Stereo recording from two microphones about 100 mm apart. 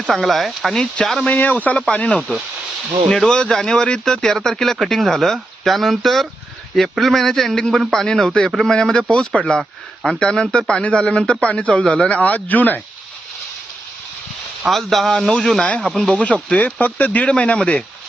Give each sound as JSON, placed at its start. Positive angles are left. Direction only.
{"t": 0.1, "sound": "a man's voice", "side_deg": 0}
{"t": 1.3, "sound": "a man's voice", "side_deg": 15}
{"t": 14.7, "sound": "a man's voice", "side_deg": 0}